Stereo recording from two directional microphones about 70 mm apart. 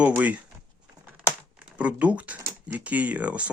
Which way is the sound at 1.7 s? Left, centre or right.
Centre.